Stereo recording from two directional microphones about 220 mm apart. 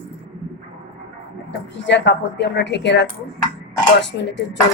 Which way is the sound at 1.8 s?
55° left (ahead or behind).